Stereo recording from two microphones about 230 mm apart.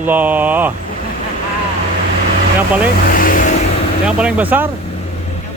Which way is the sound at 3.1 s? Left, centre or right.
Left.